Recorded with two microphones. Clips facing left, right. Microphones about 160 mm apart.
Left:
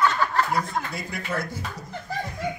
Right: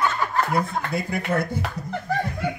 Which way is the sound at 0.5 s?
55° right (ahead or behind).